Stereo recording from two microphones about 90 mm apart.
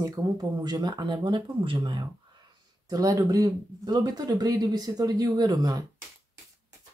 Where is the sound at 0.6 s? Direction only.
50° right (ahead or behind).